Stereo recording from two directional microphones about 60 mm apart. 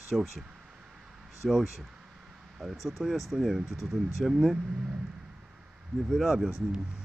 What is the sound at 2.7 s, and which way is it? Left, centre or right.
Speech, centre.